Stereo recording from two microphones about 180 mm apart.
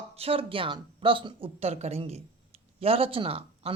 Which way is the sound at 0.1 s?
35° right (ahead or behind).